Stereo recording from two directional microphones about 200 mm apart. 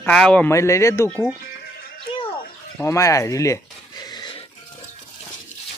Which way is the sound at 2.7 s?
15° left (ahead or behind).